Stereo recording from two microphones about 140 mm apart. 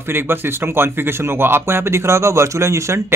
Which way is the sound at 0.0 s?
15° right (ahead or behind).